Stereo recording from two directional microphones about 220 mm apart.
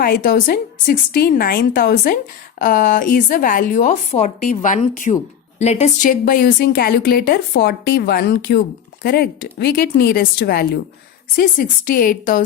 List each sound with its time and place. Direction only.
0.0 s a woman's voice: 45° left (ahead or behind)